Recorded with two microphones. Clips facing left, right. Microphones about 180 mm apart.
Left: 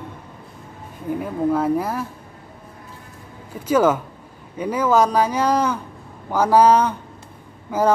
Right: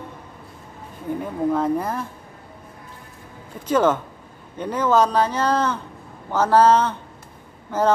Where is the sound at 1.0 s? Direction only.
5° left (ahead or behind).